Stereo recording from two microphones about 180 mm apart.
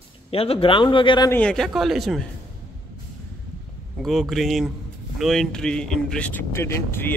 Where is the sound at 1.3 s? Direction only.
5° left (ahead or behind).